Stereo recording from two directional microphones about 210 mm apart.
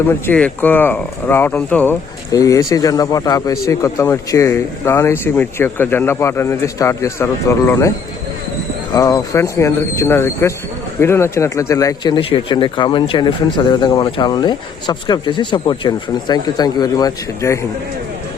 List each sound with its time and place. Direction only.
0.1 s speech: 5° left (ahead or behind)